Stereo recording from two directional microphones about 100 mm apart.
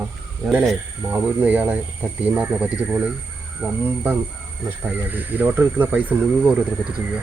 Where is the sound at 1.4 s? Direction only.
15° right (ahead or behind).